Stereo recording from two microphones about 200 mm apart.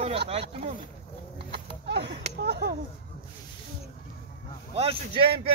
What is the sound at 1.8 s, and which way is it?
Speech, 55° right (ahead or behind).